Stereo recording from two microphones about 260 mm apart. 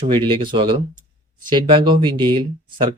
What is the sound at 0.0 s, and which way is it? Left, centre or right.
Speech, centre.